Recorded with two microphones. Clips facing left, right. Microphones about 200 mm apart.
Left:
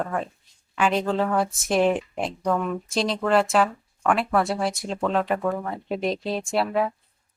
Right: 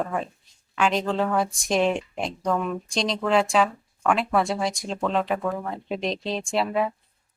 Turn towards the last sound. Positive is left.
turn(degrees=0)  # may be behind; listen again after turning